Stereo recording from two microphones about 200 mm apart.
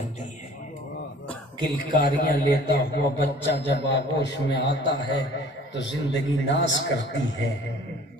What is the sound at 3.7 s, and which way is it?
Speech, 60° left (ahead or behind).